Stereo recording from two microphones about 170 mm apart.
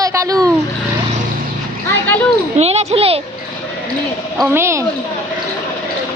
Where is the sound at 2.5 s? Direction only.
40° right (ahead or behind).